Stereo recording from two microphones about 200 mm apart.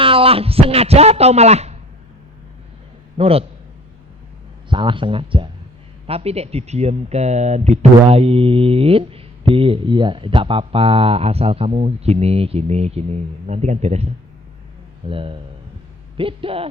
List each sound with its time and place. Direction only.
0.0 s a man's voice: 25° right (ahead or behind)
3.2 s a man's voice: 30° right (ahead or behind)
4.7 s a man's voice: 25° right (ahead or behind)